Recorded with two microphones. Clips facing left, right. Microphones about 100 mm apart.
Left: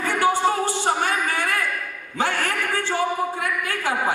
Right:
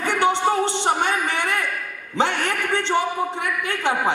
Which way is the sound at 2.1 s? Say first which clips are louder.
Right 2 dB; 20° right (ahead or behind).